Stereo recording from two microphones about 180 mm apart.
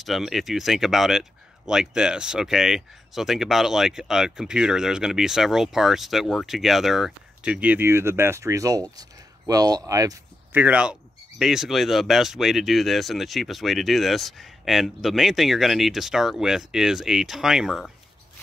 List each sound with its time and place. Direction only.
0.0 s speech: centre (ahead or behind); by 10.6 s 20° right (ahead or behind)
10.6 s speech: 5° right (ahead or behind)